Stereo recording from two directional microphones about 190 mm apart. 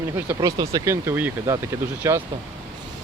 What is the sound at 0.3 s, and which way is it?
Speech, 20° right (ahead or behind).